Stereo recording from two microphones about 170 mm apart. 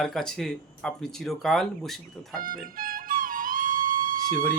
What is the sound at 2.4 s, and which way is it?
Music, 55° right (ahead or behind).